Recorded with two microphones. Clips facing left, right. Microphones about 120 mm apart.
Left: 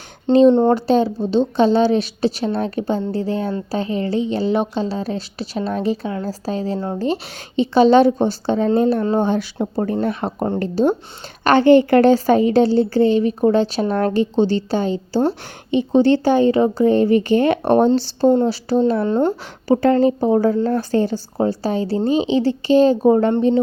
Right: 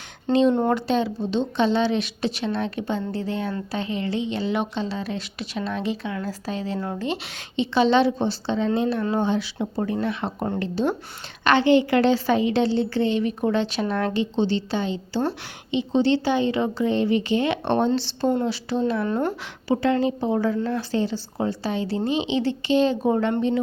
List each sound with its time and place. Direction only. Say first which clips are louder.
0.5 s a woman's voice: left 7 dB; 30° left (ahead or behind)
19.6 s a woman's voice: left 7 dB; 45° left (ahead or behind)